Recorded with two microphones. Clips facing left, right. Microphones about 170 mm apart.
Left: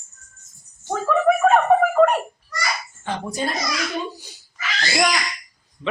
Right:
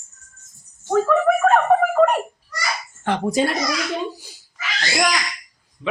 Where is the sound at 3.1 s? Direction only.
70° right (ahead or behind).